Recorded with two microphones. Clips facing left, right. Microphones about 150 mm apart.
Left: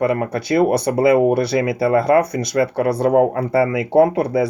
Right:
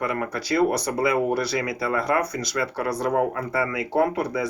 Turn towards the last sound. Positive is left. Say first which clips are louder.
# left 8 dB
turn(degrees=25)  # may be behind; listen again after turning